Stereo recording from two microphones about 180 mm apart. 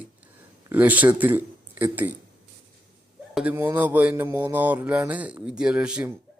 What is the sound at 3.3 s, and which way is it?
A man's voice, 10° right (ahead or behind).